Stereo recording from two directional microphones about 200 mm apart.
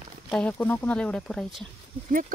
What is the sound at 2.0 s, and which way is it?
Speech, 40° right (ahead or behind).